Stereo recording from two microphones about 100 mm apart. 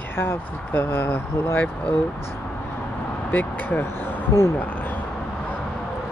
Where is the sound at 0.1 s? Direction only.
25° left (ahead or behind).